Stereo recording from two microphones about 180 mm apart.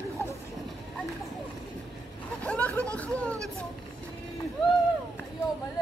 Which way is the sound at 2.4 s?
10° left (ahead or behind).